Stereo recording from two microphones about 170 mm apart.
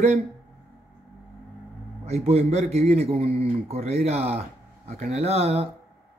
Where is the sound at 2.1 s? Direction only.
40° right (ahead or behind).